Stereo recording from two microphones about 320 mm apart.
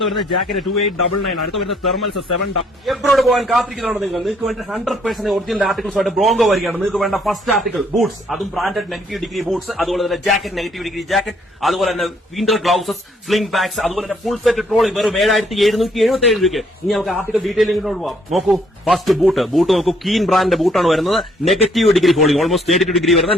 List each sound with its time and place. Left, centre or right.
0.0 s a man's voice: centre
2.3 s speech: left
2.8 s a man's voice: centre